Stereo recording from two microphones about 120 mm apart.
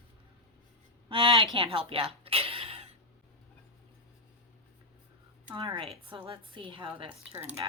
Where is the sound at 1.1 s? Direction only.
45° right (ahead or behind).